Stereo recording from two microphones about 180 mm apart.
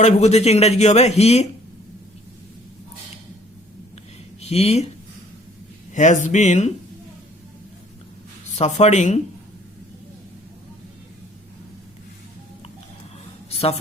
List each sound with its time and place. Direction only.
0.0 s a man's voice: 40° left (ahead or behind)
4.4 s speech: 35° left (ahead or behind)
5.9 s a man's voice: 40° left (ahead or behind)
8.5 s a man's voice: 40° left (ahead or behind)
13.5 s a sound: 35° left (ahead or behind)